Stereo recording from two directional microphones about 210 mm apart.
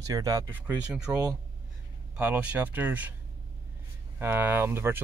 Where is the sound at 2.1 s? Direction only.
5° right (ahead or behind).